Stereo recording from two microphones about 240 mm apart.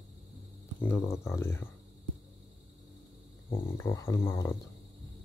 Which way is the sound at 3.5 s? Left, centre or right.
Centre.